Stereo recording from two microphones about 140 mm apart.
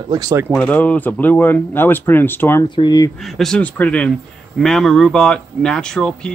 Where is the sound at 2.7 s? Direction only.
30° left (ahead or behind).